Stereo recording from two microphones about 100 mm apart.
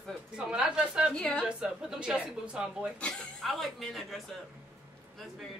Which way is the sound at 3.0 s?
5° left (ahead or behind).